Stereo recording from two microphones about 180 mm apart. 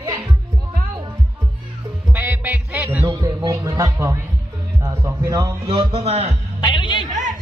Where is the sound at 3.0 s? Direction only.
25° right (ahead or behind).